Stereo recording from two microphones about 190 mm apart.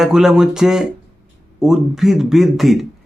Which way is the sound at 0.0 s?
Centre (ahead or behind).